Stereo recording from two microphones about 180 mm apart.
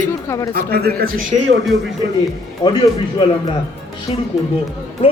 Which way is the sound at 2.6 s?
25° left (ahead or behind).